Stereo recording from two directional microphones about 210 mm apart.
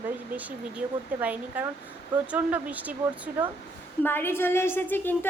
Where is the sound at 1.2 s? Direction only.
5° right (ahead or behind).